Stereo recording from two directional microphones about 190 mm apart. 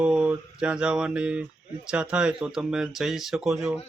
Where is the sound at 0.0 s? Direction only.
5° right (ahead or behind).